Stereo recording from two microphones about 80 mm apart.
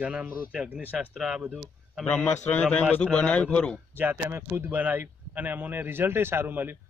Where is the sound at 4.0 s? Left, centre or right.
Right.